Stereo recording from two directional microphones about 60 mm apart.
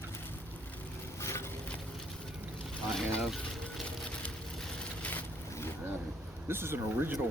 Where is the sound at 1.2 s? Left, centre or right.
Left.